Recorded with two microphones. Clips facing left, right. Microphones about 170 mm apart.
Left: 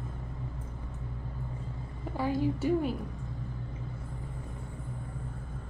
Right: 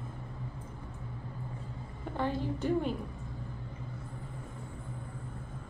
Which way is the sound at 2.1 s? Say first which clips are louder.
Left 4 dB; 5° left (ahead or behind).